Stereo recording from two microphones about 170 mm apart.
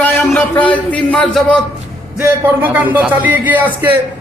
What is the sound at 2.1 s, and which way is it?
Speech, 10° right (ahead or behind).